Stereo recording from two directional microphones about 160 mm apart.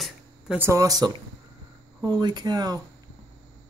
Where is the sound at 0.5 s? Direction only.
20° right (ahead or behind).